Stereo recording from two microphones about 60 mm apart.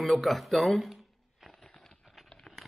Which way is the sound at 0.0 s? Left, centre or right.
Centre.